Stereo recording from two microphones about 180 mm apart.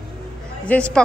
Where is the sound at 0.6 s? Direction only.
5° left (ahead or behind).